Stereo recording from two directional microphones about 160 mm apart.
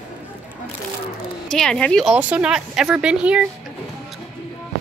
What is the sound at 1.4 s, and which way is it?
Speech, 5° left (ahead or behind).